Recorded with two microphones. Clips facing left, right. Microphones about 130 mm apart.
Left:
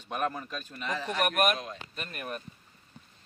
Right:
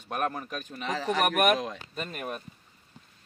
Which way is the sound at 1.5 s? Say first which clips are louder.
Right 7 dB; 90° right.